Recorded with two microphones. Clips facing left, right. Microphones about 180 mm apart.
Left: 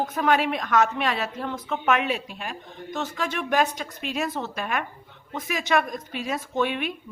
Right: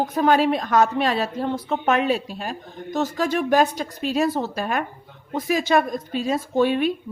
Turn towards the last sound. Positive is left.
turn(degrees=-35)  # may be behind; listen again after turning